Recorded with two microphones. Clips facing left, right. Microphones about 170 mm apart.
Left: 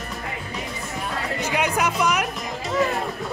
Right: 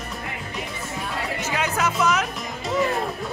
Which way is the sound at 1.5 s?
15° left (ahead or behind).